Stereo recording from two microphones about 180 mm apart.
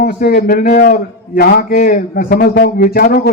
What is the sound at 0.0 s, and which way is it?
A man's voice, 60° left (ahead or behind).